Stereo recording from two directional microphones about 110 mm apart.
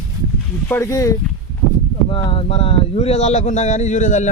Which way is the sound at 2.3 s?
55° left (ahead or behind).